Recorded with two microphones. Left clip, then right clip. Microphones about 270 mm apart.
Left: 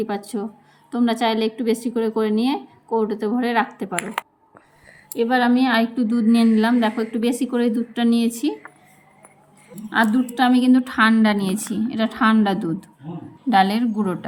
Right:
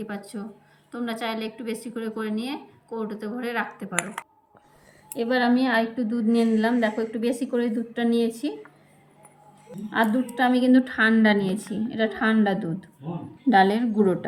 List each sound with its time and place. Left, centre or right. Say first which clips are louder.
0.9 s a woman's voice: left 9 dB; left
5.1 s a woman's voice: left 4 dB; centre
10.0 s a woman's voice: left 4 dB; centre
13.5 s a woman's voice: left 2 dB; left
14.0 s a woman's voice: right 3 dB; centre